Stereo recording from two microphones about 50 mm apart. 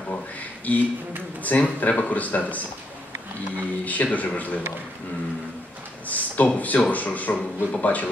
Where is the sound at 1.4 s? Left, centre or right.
Left.